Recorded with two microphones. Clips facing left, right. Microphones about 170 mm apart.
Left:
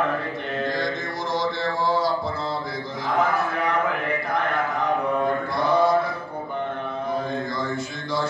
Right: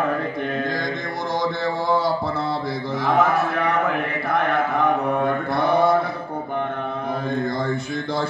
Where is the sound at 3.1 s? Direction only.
65° right (ahead or behind).